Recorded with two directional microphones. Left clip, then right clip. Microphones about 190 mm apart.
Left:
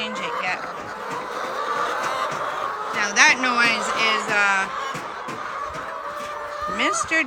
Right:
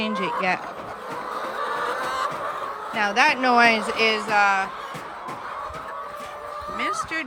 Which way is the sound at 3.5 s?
25° right (ahead or behind).